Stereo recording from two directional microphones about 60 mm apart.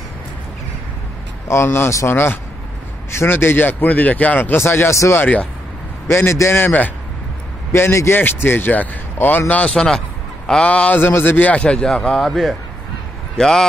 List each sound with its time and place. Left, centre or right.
1.5 s speech: left
4.6 s speech: left
5.2 s speech: left
6.0 s a man's voice: left
7.7 s speech: left
8.2 s speech: left
9.8 s a sound: centre
10.7 s speech: left
11.0 s speech: left
11.6 s a man's voice: centre